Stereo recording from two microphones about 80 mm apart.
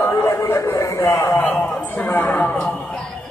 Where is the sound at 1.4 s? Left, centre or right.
Centre.